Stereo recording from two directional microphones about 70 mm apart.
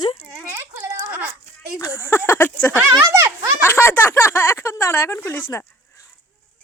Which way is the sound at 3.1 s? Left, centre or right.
Right.